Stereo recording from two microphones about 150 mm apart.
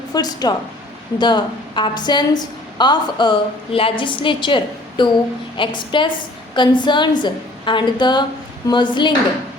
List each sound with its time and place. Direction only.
0.1 s a woman's voice: 25° left (ahead or behind)